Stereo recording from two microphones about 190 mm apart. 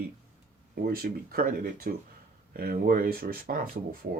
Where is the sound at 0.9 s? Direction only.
50° right (ahead or behind).